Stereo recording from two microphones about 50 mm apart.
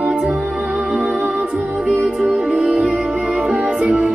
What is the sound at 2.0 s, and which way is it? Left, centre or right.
Music, right.